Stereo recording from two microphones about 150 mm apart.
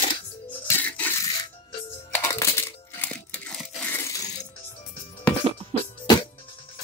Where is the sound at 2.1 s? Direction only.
15° left (ahead or behind).